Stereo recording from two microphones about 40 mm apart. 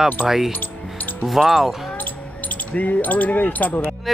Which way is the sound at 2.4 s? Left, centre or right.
Left.